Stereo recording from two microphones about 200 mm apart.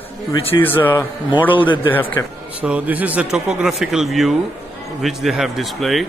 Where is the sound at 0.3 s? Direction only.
30° left (ahead or behind).